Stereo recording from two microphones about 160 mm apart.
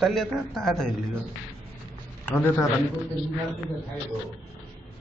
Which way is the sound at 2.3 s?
15° left (ahead or behind).